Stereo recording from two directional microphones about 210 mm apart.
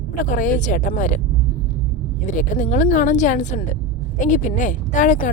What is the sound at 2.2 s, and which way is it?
A woman's voice, 40° left (ahead or behind).